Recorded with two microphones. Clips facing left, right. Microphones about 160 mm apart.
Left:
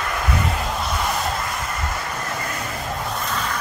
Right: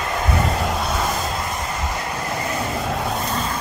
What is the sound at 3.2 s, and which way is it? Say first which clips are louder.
Vehicle: right 2 dB; 30° right (ahead or behind).